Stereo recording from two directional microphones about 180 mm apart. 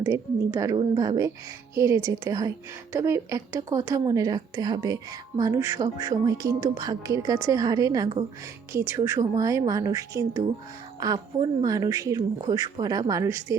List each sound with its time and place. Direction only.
0.0 s a woman's voice: 15° right (ahead or behind)